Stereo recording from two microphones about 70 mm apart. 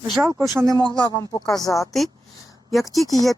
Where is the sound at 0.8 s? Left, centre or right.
Right.